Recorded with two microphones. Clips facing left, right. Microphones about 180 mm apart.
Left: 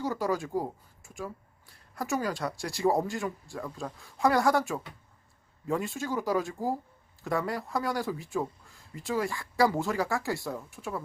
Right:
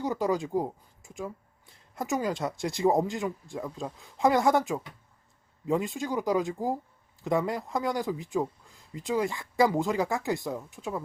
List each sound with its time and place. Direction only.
0.0 s a woman's voice: 20° right (ahead or behind)